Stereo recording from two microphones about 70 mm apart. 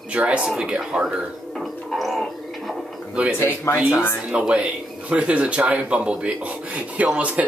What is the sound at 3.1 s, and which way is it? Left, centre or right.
Speech, centre.